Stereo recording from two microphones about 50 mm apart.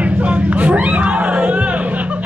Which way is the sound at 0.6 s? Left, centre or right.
Right.